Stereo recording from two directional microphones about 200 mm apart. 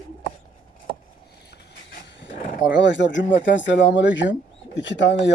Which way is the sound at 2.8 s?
65° left (ahead or behind).